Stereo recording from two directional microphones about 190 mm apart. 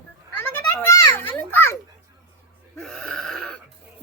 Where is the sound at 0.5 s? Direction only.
10° left (ahead or behind).